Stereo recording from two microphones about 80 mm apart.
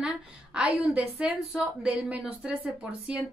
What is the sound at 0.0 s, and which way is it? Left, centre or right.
A woman's voice, centre.